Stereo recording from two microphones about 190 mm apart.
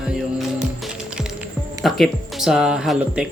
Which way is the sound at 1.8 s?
Centre (ahead or behind).